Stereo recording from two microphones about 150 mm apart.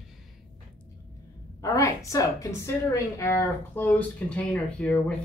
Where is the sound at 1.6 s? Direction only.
20° left (ahead or behind).